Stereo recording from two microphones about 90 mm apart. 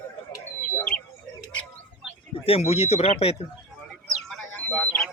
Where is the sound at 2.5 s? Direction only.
90° left.